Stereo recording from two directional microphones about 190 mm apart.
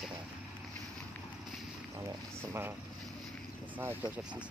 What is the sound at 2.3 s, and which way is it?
Speech, 10° right (ahead or behind).